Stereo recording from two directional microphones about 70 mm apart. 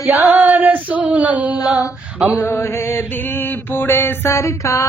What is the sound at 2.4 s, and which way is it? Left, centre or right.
Music, left.